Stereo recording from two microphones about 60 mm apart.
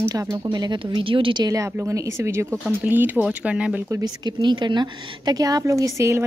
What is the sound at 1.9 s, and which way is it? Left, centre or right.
Speech, right.